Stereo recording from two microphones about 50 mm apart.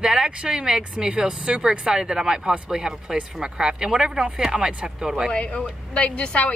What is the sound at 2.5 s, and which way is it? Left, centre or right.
Speech, right.